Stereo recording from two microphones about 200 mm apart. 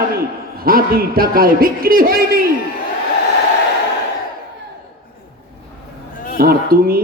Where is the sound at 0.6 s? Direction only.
45° right (ahead or behind).